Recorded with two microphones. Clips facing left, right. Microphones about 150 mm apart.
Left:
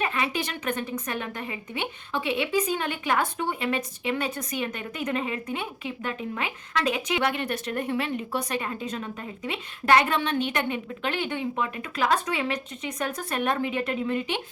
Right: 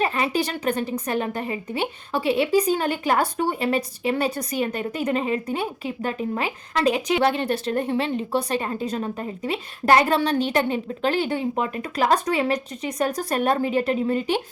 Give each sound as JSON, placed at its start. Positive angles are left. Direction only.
{"t": 0.0, "sound": "a woman's voice", "side_deg": -35}